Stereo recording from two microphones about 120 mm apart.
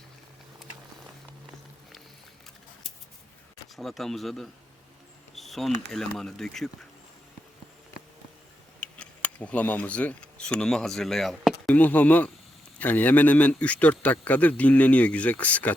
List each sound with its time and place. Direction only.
3.8 s speech: centre (ahead or behind)
8.8 s speech: 10° left (ahead or behind)
11.7 s speech: 15° left (ahead or behind)